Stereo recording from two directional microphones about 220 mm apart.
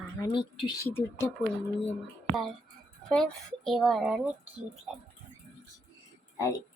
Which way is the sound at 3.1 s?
Centre (ahead or behind).